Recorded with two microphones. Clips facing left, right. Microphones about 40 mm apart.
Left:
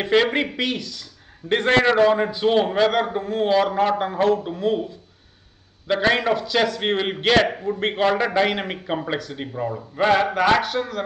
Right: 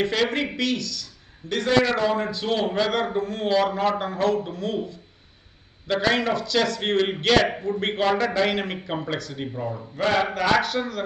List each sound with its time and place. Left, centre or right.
0.0 s speech: centre
1.4 s a man's voice: right
2.0 s a man's voice: centre
9.5 s a man's voice: left; by 11.0 s centre